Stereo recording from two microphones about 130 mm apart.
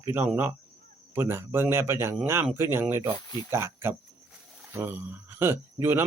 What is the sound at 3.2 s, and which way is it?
Speech, 35° left (ahead or behind).